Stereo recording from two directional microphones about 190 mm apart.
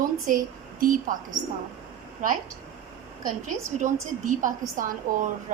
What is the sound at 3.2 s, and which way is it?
A woman's voice, 40° right (ahead or behind).